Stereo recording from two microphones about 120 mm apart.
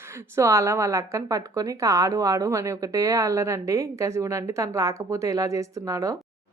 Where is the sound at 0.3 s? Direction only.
25° right (ahead or behind).